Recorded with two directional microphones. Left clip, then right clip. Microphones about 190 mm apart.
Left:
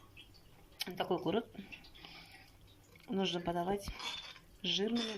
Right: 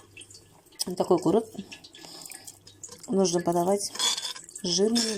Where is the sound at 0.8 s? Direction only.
35° right (ahead or behind).